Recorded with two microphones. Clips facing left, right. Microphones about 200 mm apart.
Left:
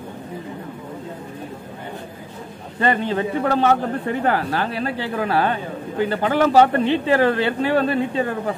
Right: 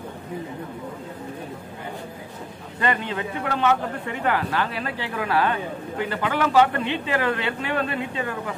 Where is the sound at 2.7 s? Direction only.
35° left (ahead or behind).